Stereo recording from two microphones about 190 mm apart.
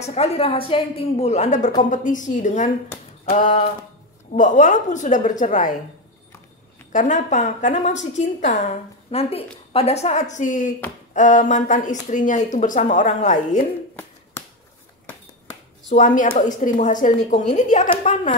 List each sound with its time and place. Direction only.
0.0 s a woman's voice: 35° left (ahead or behind)
6.9 s speech: 40° left (ahead or behind)
15.9 s speech: 40° left (ahead or behind)